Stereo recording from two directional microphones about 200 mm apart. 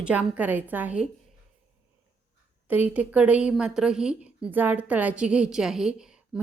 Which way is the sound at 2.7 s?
10° right (ahead or behind).